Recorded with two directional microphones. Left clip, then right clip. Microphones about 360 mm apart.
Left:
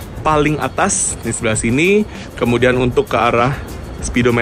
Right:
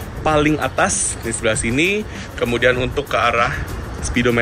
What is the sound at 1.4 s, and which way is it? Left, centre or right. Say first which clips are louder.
Speech: left 2 dB; centre.